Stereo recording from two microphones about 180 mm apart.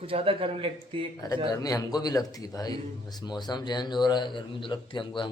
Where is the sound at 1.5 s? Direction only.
20° left (ahead or behind).